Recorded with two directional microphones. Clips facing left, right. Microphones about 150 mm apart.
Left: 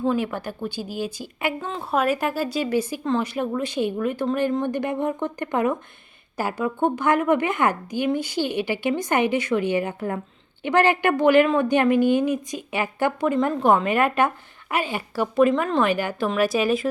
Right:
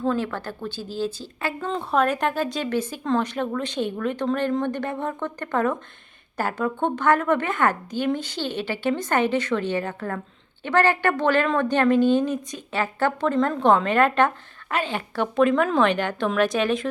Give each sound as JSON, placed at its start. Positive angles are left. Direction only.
{"t": 0.0, "sound": "a woman's voice", "side_deg": 15}